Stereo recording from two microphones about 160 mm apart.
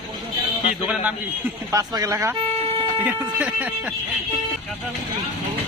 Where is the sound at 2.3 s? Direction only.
35° right (ahead or behind).